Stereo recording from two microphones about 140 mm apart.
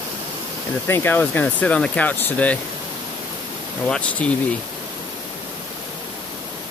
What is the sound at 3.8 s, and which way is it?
Speech, 5° left (ahead or behind).